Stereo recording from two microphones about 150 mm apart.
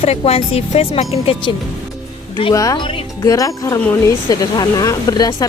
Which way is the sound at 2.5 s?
25° left (ahead or behind).